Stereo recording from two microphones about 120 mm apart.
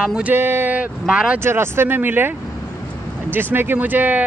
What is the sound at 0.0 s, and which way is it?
Speech, 10° right (ahead or behind).